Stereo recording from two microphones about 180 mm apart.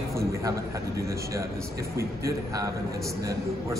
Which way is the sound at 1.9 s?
20° right (ahead or behind).